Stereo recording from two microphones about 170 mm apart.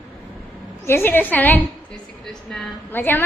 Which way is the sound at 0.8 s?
15° left (ahead or behind).